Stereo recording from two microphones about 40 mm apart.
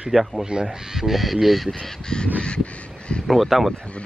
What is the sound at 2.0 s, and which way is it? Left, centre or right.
Crow, centre.